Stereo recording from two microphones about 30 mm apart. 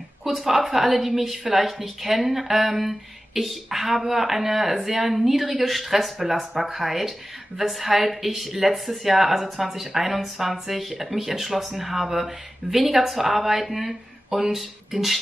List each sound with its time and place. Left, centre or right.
0.2 s speech: centre